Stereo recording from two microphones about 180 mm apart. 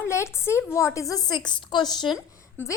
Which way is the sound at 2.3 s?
15° left (ahead or behind).